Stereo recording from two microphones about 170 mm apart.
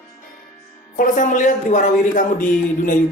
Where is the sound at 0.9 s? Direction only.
50° left (ahead or behind).